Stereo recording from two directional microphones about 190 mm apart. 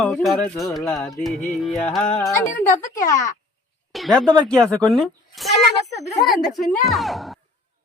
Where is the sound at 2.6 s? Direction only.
45° left (ahead or behind).